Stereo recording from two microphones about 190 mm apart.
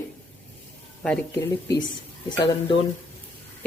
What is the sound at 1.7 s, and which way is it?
Speech, 20° left (ahead or behind).